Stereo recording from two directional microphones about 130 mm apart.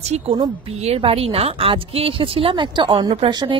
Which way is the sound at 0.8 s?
50° right (ahead or behind).